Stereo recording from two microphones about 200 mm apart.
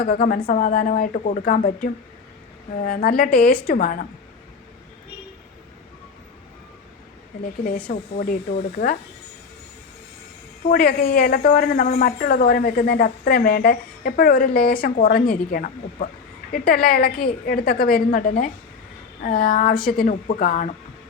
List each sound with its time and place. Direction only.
0.0 s a woman's voice: 45° left (ahead or behind)
7.6 s a woman's voice: 45° left (ahead or behind)
10.7 s a woman's voice: 50° left (ahead or behind)